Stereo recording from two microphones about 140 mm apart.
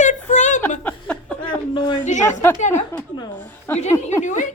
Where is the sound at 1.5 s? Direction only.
35° left (ahead or behind).